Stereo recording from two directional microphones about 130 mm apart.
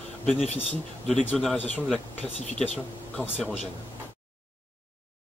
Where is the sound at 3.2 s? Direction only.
15° left (ahead or behind).